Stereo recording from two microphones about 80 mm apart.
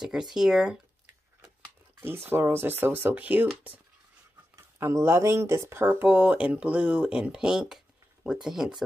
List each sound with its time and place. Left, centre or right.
0.0 s speech: centre
2.0 s speech: right
4.7 s speech: right; by 8.8 s centre